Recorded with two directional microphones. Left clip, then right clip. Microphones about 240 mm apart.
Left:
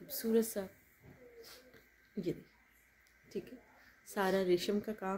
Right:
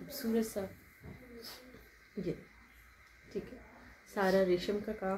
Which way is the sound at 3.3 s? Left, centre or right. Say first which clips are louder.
Right 2 dB; left.